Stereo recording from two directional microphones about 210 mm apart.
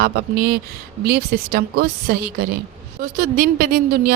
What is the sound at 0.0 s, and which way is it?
Speech, 50° right (ahead or behind).